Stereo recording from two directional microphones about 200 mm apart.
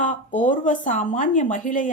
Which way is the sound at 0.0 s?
40° left (ahead or behind).